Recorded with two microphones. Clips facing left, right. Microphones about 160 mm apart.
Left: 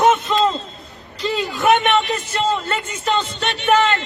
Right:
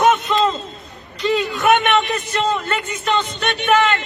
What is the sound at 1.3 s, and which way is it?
A man's voice, 25° left (ahead or behind).